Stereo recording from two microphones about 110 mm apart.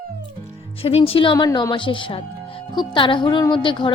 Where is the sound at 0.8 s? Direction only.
60° left (ahead or behind).